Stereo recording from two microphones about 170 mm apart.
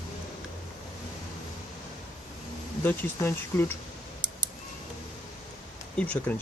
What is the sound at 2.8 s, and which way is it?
Speech, 10° left (ahead or behind).